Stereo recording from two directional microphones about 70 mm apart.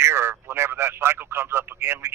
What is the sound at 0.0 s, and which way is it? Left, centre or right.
Speech, right.